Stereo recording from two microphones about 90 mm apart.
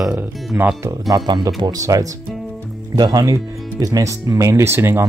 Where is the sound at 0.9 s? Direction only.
40° right (ahead or behind).